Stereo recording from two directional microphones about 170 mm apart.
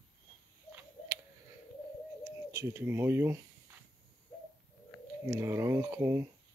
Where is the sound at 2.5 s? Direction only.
15° right (ahead or behind).